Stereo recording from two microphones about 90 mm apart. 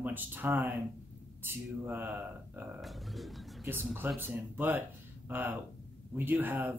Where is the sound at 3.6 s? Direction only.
25° right (ahead or behind).